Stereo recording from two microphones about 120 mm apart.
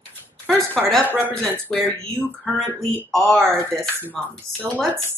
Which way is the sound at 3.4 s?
20° right (ahead or behind).